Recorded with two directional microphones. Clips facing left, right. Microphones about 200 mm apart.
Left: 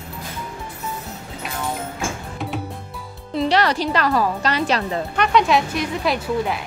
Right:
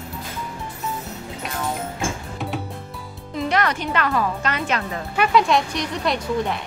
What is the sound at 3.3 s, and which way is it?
A woman's voice, 30° left (ahead or behind).